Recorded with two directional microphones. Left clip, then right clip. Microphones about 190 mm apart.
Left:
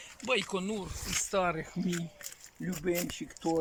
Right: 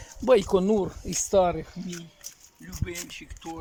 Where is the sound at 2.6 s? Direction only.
45° left (ahead or behind).